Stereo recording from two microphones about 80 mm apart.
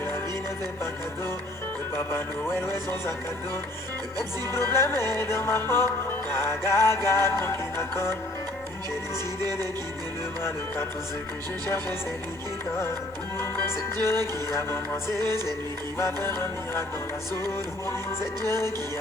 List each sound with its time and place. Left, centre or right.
2.0 s music: left
4.5 s music: left
9.4 s music: right
13.4 s music: left
15.2 s music: right
16.0 s music: left
18.4 s music: left